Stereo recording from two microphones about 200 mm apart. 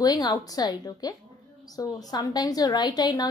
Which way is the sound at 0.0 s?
20° left (ahead or behind).